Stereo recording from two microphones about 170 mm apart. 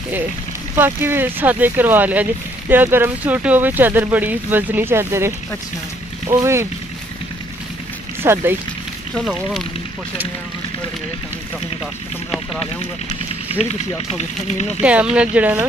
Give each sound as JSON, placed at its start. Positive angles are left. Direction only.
{"t": 0.7, "sound": "speech", "side_deg": -15}
{"t": 8.2, "sound": "speech", "side_deg": -15}
{"t": 9.1, "sound": "speech", "side_deg": 0}
{"t": 13.6, "sound": "speech", "side_deg": 40}
{"t": 14.8, "sound": "speech", "side_deg": -10}